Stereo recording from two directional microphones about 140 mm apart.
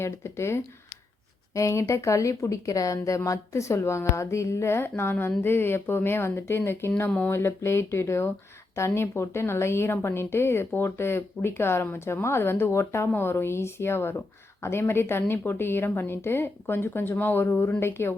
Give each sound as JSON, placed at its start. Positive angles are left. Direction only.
{"t": 0.0, "sound": "a woman's voice", "side_deg": 20}